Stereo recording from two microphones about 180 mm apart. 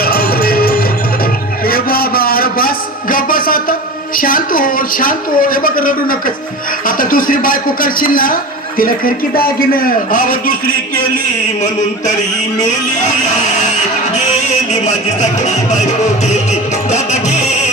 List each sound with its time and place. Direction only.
0.0 s music: 60° left (ahead or behind)
1.6 s a sound: 55° left (ahead or behind)
6.8 s a man's voice: 50° left (ahead or behind)
16.2 s music: 40° left (ahead or behind)